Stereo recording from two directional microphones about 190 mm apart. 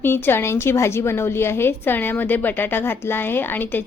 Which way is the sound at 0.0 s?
10° left (ahead or behind).